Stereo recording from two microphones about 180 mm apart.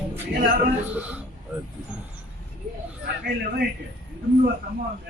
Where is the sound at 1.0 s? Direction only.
5° right (ahead or behind).